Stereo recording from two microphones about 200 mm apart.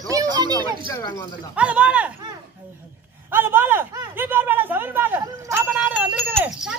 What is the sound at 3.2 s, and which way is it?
Speech, 10° right (ahead or behind).